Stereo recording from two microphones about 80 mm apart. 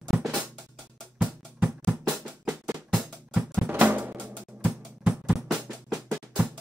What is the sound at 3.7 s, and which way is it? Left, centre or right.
Drum, right.